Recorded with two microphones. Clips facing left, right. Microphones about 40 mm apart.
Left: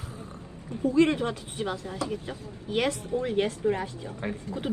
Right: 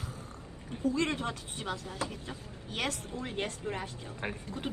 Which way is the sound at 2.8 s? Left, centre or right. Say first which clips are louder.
Left 8 dB; left.